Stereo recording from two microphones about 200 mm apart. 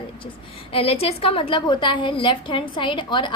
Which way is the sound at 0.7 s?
30° left (ahead or behind).